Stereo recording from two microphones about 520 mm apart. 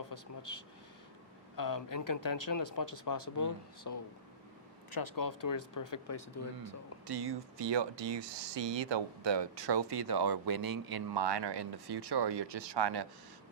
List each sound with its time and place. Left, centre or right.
0.1 s speech: left
4.9 s speech: left
7.1 s speech: right